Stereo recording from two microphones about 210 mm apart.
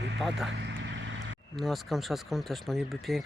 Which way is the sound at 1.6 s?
Centre (ahead or behind).